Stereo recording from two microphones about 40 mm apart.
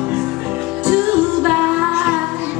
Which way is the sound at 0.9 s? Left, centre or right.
Right.